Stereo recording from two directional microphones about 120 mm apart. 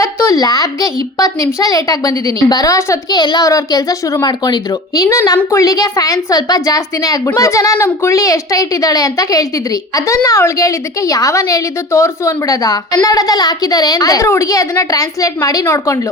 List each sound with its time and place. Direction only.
0.0 s a woman's voice: 25° left (ahead or behind)